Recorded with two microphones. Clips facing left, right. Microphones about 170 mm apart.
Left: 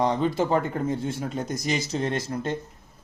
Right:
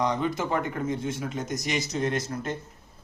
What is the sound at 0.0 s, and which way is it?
Speech, 30° left (ahead or behind).